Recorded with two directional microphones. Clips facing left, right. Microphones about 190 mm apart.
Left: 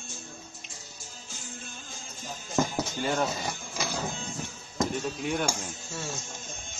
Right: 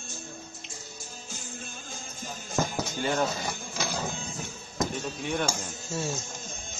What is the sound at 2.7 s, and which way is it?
Music, centre (ahead or behind).